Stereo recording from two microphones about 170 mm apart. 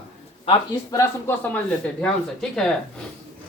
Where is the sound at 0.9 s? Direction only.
10° left (ahead or behind).